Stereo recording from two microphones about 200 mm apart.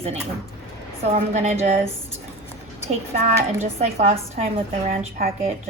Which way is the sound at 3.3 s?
30° right (ahead or behind).